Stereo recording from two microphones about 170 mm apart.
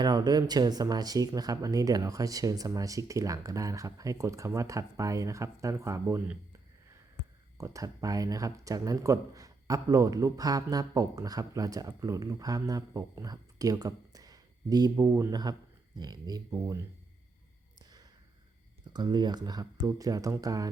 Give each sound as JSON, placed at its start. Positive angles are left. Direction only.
{"t": 0.0, "sound": "speech", "side_deg": -25}
{"t": 7.6, "sound": "speech", "side_deg": -20}
{"t": 17.7, "sound": "a sound", "side_deg": -25}
{"t": 18.9, "sound": "speech", "side_deg": -25}